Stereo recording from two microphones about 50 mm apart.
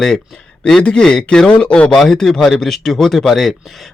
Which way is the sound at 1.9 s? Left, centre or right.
Centre.